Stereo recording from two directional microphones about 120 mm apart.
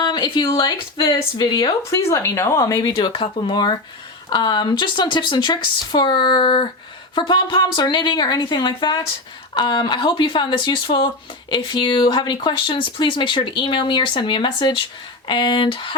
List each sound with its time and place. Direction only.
0.0 s speech: 40° left (ahead or behind)
1.9 s speech: 25° left (ahead or behind)
3.0 s speech: 45° left (ahead or behind)